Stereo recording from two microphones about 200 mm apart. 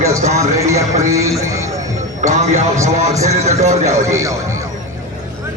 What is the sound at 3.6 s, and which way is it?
Speech, 35° right (ahead or behind).